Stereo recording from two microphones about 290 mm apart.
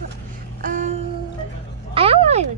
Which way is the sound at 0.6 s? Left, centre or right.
Right.